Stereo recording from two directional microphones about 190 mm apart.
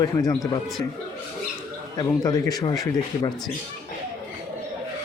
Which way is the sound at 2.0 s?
20° left (ahead or behind).